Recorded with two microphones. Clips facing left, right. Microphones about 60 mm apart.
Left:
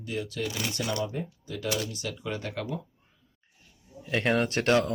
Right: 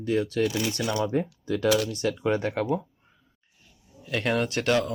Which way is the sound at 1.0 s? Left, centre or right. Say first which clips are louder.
Right 9 dB; right.